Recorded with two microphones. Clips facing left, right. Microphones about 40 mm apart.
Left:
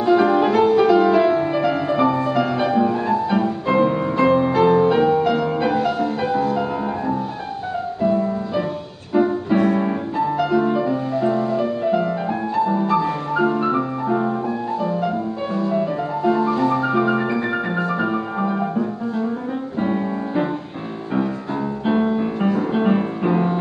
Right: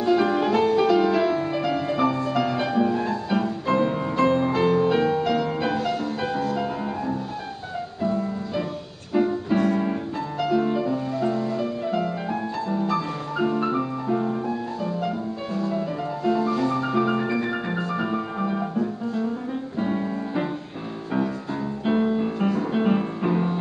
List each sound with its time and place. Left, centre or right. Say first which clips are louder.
0.0 s music: left 5 dB; centre
21.8 s music: left 2 dB; centre